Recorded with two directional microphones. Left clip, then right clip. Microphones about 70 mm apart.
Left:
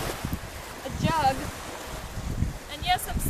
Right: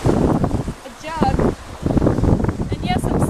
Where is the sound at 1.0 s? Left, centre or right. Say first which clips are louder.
Right 3 dB; left.